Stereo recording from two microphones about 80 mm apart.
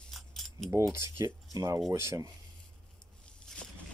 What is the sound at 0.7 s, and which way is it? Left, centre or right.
Speech, right.